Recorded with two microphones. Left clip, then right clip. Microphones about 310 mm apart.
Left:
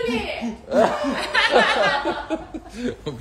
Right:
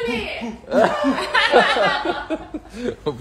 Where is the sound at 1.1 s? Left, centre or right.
Centre.